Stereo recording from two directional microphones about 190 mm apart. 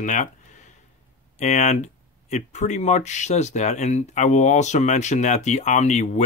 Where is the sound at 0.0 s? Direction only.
40° left (ahead or behind).